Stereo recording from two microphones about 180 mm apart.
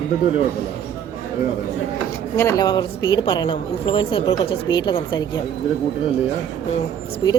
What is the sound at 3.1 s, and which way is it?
A woman's voice, 25° left (ahead or behind).